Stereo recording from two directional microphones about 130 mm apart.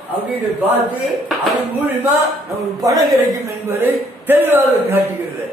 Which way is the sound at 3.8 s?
15° right (ahead or behind).